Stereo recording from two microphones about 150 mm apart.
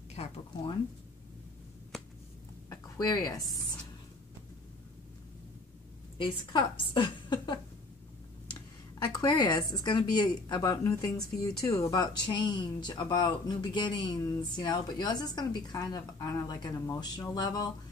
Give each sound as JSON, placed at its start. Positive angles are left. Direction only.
{"t": 0.2, "sound": "speech", "side_deg": 45}
{"t": 2.7, "sound": "speech", "side_deg": 25}
{"t": 6.1, "sound": "a woman's voice", "side_deg": 35}
{"t": 9.0, "sound": "speech", "side_deg": 25}